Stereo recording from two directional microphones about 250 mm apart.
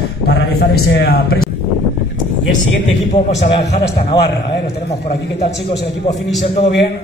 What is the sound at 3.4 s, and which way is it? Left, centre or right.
Speech, left.